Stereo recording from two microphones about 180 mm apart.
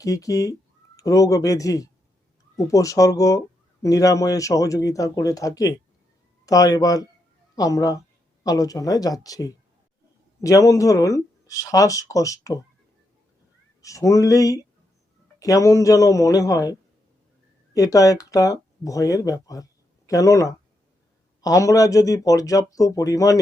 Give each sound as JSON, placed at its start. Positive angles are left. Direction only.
{"t": 0.0, "sound": "speech", "side_deg": 20}
{"t": 13.8, "sound": "a sound", "side_deg": 15}
{"t": 15.4, "sound": "speech", "side_deg": 20}
{"t": 17.7, "sound": "speech", "side_deg": 20}